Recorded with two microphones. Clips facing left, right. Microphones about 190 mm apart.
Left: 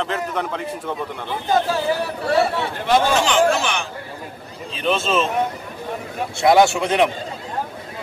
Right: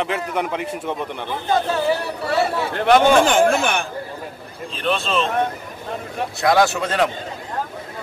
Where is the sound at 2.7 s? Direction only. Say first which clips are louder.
Right 6 dB; 65° right (ahead or behind).